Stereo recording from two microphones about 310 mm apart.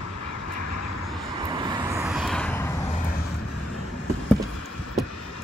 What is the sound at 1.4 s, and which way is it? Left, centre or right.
Vehicle, centre.